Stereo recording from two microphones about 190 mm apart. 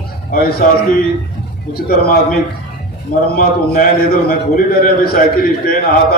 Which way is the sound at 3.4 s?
50° left (ahead or behind).